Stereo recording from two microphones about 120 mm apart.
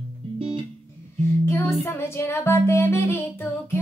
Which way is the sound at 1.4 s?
20° left (ahead or behind).